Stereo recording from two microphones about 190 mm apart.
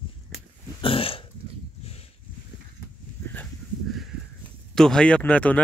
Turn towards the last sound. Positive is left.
turn(degrees=5)  # may be behind; listen again after turning